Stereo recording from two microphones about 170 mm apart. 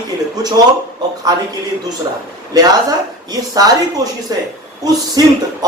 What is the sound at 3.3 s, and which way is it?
Speech, 20° right (ahead or behind).